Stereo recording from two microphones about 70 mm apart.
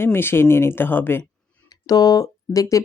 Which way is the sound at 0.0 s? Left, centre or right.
Left.